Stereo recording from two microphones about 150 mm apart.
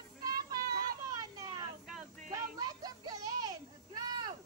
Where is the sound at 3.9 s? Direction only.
25° right (ahead or behind).